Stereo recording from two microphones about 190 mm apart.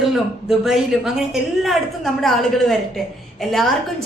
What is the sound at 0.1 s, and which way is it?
A woman's voice, centre (ahead or behind).